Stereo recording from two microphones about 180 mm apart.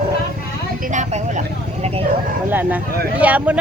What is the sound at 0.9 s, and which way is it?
Vehicle, 40° right (ahead or behind).